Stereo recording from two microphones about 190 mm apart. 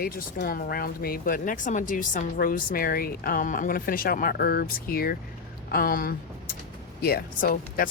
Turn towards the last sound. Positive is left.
turn(degrees=50)  # may be behind; listen again after turning